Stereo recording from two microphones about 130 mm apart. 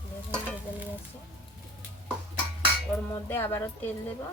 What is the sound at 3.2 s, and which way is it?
Music, 15° left (ahead or behind).